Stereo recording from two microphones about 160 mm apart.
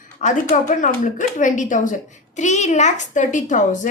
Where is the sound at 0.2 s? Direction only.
50° left (ahead or behind).